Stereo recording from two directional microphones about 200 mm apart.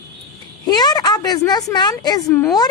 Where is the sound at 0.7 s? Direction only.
20° left (ahead or behind).